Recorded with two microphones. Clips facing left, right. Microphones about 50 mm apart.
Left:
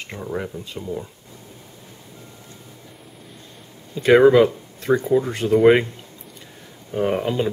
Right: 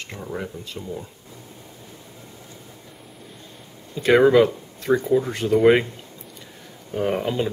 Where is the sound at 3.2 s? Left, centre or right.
Centre.